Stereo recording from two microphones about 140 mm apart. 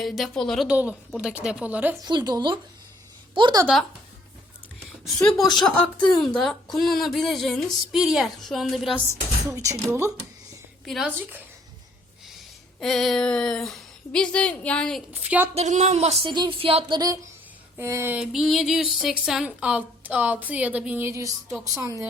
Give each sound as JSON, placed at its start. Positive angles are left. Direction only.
{"t": 0.0, "sound": "speech", "side_deg": 0}
{"t": 0.7, "sound": "a woman's voice", "side_deg": -10}
{"t": 2.0, "sound": "speech", "side_deg": -30}
{"t": 5.0, "sound": "speech", "side_deg": 0}
{"t": 9.5, "sound": "speech", "side_deg": -20}
{"t": 10.8, "sound": "a woman's voice", "side_deg": 0}
{"t": 12.8, "sound": "speech", "side_deg": 0}
{"t": 15.1, "sound": "a woman's voice", "side_deg": -10}
{"t": 15.5, "sound": "speech", "side_deg": -55}
{"t": 16.3, "sound": "speech", "side_deg": -35}
{"t": 17.7, "sound": "a woman's voice", "side_deg": -15}
{"t": 18.2, "sound": "a woman's voice", "side_deg": 0}